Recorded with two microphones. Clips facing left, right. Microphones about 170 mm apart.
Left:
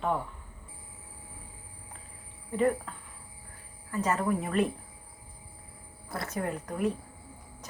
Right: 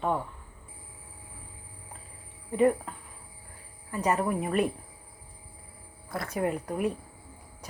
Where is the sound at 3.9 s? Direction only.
15° right (ahead or behind).